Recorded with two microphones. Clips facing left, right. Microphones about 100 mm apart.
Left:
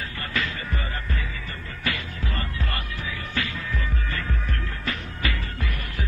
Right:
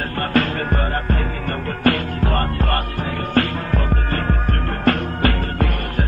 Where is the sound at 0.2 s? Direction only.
50° right (ahead or behind).